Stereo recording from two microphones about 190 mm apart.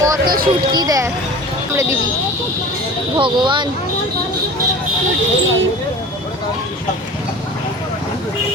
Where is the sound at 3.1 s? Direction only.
25° right (ahead or behind).